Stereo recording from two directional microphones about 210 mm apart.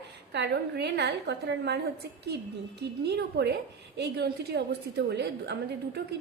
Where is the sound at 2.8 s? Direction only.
55° right (ahead or behind).